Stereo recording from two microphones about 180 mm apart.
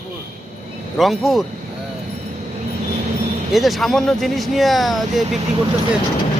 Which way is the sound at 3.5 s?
Centre (ahead or behind).